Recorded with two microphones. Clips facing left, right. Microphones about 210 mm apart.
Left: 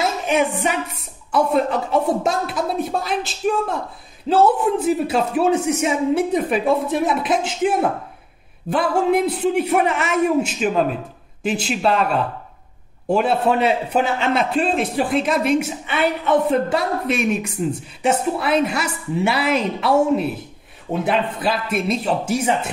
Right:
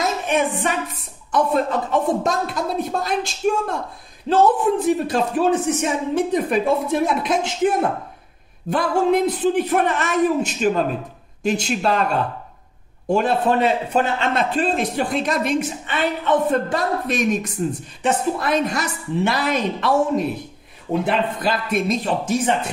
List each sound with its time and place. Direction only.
0.0 s music: 10° left (ahead or behind)
1.3 s a woman's voice: 10° left (ahead or behind)